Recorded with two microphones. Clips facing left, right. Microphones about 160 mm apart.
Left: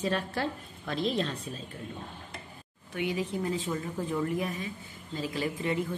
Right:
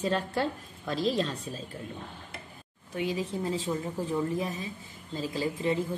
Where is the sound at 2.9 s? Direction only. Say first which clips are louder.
Even; 35° right (ahead or behind).